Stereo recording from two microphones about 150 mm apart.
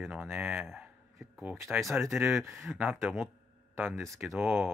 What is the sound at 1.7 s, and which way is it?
Speech, centre (ahead or behind).